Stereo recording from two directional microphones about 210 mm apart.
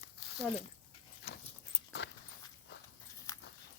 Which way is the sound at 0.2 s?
50° left (ahead or behind).